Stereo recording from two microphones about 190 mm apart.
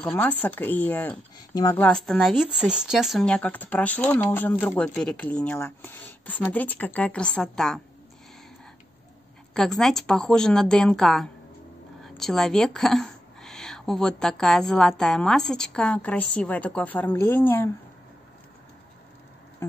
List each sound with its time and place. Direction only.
0.0 s speech: 10° left (ahead or behind)
1.9 s speech: 5° left (ahead or behind)
9.5 s a woman's voice: centre (ahead or behind)
19.6 s a sound: 15° left (ahead or behind)